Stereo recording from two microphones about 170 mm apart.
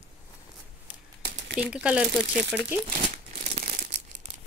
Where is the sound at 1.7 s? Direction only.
5° right (ahead or behind).